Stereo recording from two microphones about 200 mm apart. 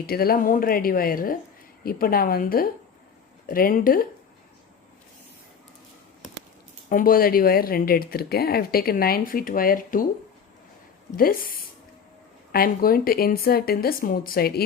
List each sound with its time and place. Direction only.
0.0 s speech: 50° left (ahead or behind)
6.9 s speech: 45° left (ahead or behind)
11.2 s speech: 45° left (ahead or behind)